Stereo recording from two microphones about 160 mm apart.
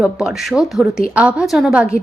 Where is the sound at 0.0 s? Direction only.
5° right (ahead or behind).